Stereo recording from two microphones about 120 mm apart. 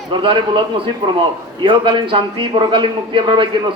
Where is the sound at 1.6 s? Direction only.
45° right (ahead or behind).